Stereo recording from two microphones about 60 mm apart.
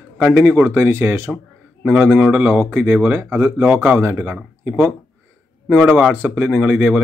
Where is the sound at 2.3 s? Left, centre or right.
Right.